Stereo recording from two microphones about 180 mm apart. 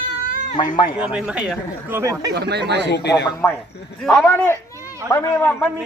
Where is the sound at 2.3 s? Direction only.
70° right (ahead or behind).